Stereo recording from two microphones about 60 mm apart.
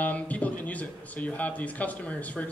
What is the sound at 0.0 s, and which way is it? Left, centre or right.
Speech, left.